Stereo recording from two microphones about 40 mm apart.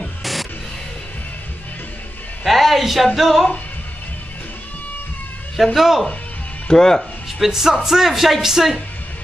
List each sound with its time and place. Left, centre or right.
0.0 s music: centre
2.4 s a sound: centre
3.2 s speech: centre
5.8 s speech: centre
6.7 s speech: centre
7.0 s speech: centre